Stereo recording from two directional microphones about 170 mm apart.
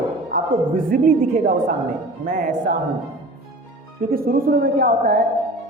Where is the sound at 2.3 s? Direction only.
50° right (ahead or behind).